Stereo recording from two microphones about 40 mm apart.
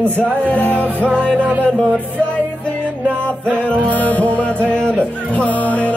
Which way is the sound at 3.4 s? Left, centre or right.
Left.